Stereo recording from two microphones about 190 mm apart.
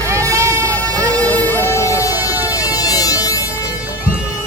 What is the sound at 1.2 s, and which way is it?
Music, 10° left (ahead or behind).